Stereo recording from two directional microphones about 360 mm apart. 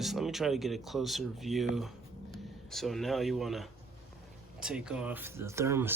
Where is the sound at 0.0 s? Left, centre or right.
Centre.